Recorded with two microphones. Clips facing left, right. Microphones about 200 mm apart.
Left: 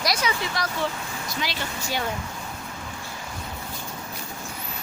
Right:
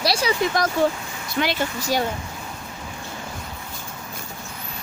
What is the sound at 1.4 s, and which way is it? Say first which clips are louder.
Speech: right 9 dB; 65° right (ahead or behind).